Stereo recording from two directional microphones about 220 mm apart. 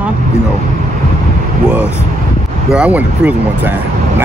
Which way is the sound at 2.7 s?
5° right (ahead or behind).